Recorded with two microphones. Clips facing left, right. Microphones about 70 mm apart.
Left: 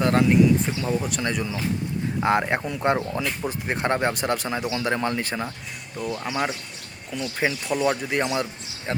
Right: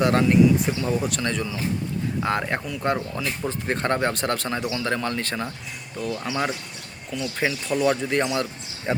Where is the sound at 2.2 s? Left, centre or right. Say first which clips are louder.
Left 5 dB; left.